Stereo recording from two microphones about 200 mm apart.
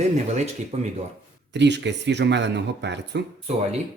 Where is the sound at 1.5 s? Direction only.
60° right (ahead or behind).